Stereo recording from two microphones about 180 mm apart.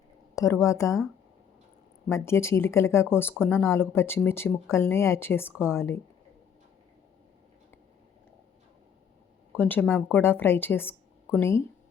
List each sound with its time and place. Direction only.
0.3 s speech: 15° left (ahead or behind)
2.0 s speech: 15° left (ahead or behind)
9.6 s speech: 10° left (ahead or behind)